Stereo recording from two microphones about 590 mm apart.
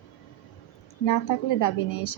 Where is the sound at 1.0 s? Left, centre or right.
Left.